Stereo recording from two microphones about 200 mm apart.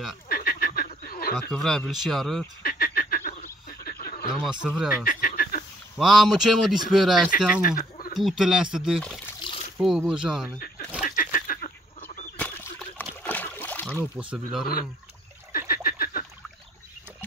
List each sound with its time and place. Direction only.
0.3 s frog: 45° left (ahead or behind)
1.5 s a man's voice: centre (ahead or behind)
2.6 s goose: 45° left (ahead or behind)
4.5 s a man's voice: 5° right (ahead or behind)
4.9 s frog: 45° left (ahead or behind)
5.9 s a man's voice: centre (ahead or behind)
7.2 s speech: 45° left (ahead or behind)
7.6 s chicken: 45° left (ahead or behind)
8.1 s a man's voice: centre (ahead or behind)
11.0 s a sound: 40° left (ahead or behind)
12.4 s splash: 5° left (ahead or behind)
14.3 s a man's voice: centre (ahead or behind)
15.7 s a sound: 45° left (ahead or behind)